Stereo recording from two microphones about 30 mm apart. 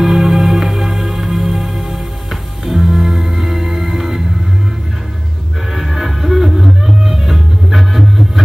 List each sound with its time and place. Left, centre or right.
0.0 s music: centre
5.7 s music: centre